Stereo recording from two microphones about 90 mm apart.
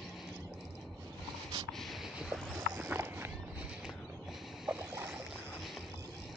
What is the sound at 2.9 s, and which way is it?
Walk, 25° right (ahead or behind).